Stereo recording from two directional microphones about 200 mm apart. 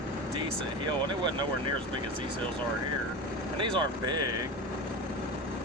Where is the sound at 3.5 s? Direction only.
25° right (ahead or behind).